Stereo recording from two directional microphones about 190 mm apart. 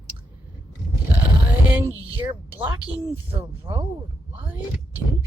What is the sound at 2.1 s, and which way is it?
Speech, 10° right (ahead or behind).